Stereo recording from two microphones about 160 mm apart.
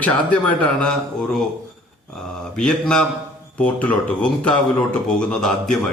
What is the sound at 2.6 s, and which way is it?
A man's voice, 5° left (ahead or behind).